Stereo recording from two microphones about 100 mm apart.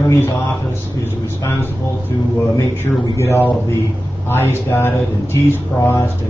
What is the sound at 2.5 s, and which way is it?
Speech, 25° left (ahead or behind).